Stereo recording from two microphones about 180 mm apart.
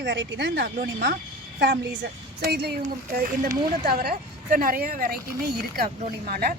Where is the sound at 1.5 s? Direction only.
75° right (ahead or behind).